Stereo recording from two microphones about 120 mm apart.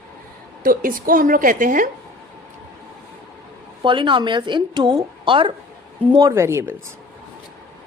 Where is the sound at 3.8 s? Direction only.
40° right (ahead or behind).